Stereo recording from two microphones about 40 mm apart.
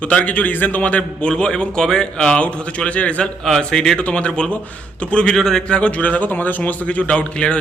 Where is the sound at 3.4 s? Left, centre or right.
Centre.